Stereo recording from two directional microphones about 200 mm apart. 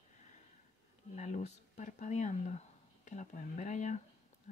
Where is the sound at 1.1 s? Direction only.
35° left (ahead or behind).